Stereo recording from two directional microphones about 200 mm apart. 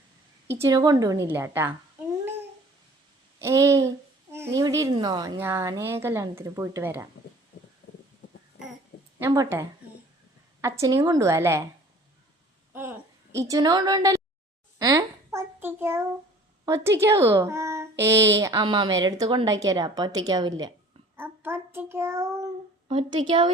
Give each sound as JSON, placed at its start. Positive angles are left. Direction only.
{"t": 0.6, "sound": "speech", "side_deg": -20}
{"t": 3.3, "sound": "babbling", "side_deg": -15}
{"t": 5.4, "sound": "speech", "side_deg": -15}
{"t": 9.1, "sound": "speech", "side_deg": -15}
{"t": 12.7, "sound": "a woman's voice", "side_deg": -10}
{"t": 14.8, "sound": "a sound", "side_deg": -15}
{"t": 16.6, "sound": "a woman's voice", "side_deg": -15}
{"t": 21.2, "sound": "child singing", "side_deg": -10}
{"t": 22.9, "sound": "a woman's voice", "side_deg": -25}